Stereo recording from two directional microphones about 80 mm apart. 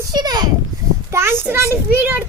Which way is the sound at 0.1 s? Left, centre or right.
Right.